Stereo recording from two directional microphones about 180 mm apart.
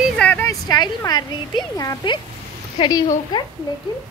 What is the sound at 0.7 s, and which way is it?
Speech, 20° left (ahead or behind).